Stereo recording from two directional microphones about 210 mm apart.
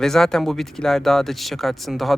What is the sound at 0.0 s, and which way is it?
Speech, centre (ahead or behind).